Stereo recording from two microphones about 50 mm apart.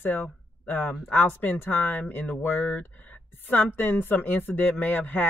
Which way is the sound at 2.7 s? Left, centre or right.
Left.